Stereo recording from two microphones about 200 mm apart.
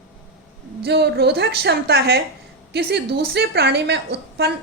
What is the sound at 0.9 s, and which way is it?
A woman's voice, 55° right (ahead or behind).